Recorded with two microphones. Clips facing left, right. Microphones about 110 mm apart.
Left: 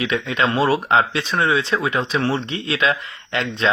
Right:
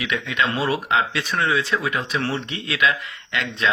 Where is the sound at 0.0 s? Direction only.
30° left (ahead or behind).